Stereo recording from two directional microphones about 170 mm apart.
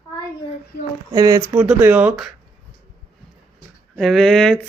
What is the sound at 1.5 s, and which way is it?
Speech, 5° right (ahead or behind).